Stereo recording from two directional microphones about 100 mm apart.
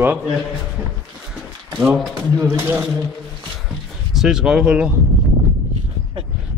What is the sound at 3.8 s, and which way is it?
Speech, 5° right (ahead or behind).